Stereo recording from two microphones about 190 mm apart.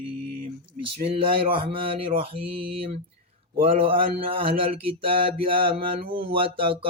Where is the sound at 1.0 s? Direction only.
30° right (ahead or behind).